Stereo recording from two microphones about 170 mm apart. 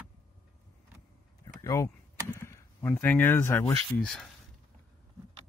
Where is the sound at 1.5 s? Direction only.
20° left (ahead or behind).